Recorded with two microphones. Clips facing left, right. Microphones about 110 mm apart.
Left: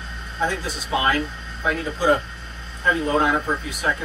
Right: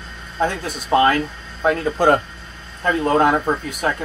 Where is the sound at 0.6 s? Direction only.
50° right (ahead or behind).